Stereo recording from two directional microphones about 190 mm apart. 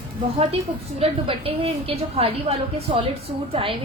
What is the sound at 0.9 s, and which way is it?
A woman's voice, 30° right (ahead or behind).